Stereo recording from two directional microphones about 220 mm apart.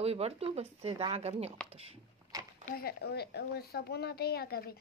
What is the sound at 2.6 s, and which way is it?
A woman's voice, 45° left (ahead or behind).